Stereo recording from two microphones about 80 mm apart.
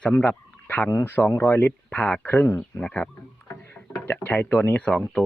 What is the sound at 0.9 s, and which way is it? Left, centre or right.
Speech, left.